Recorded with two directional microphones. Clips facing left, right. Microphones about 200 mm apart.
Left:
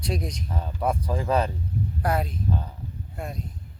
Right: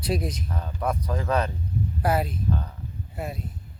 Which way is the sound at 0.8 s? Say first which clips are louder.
Left 1 dB; 30° left (ahead or behind).